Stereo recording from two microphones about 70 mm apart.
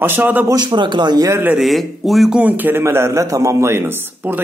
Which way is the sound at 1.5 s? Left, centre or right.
Centre.